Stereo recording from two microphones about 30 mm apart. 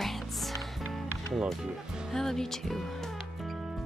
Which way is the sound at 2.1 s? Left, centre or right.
Centre.